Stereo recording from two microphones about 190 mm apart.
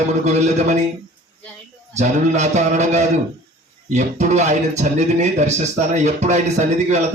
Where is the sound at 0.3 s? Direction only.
35° right (ahead or behind).